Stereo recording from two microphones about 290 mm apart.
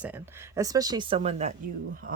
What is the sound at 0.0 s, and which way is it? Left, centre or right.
Speech, centre.